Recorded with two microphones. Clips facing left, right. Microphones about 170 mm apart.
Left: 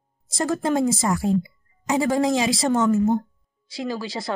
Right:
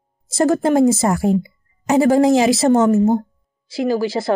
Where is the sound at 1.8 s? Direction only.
30° right (ahead or behind).